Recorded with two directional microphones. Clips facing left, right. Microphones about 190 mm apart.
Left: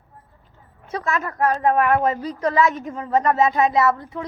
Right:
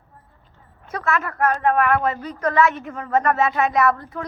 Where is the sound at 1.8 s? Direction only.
20° left (ahead or behind).